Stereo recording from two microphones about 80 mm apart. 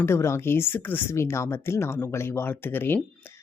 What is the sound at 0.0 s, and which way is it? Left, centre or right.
A woman's voice, left.